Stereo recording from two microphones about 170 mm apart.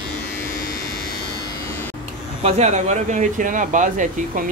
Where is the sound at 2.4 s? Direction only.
40° right (ahead or behind).